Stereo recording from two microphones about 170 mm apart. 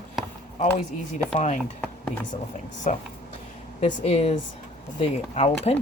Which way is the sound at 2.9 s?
45° left (ahead or behind).